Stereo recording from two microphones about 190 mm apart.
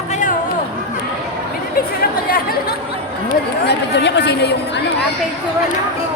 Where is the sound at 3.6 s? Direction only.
65° left (ahead or behind).